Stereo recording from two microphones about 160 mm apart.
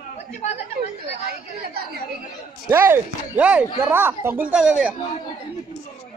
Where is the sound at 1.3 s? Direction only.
70° right (ahead or behind).